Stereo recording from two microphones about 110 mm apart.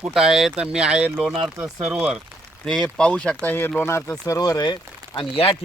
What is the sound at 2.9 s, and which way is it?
Speech, 10° left (ahead or behind).